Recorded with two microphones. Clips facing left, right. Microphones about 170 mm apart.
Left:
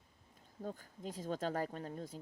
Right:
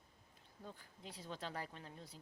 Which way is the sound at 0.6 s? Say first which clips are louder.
Left 10 dB; 45° left (ahead or behind).